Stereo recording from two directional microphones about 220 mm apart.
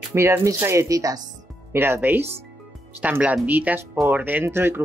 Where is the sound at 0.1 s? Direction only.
10° right (ahead or behind).